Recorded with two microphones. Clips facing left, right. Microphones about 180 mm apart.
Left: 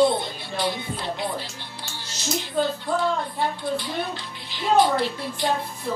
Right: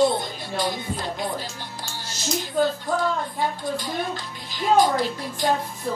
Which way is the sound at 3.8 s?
45° right (ahead or behind).